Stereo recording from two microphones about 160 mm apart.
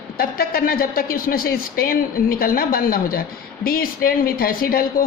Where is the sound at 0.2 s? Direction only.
65° left (ahead or behind).